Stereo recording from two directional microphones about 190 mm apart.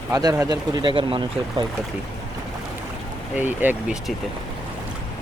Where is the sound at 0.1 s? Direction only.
20° right (ahead or behind).